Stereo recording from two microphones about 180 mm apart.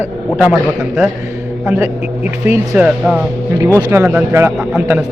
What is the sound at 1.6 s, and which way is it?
A man's voice, 10° right (ahead or behind).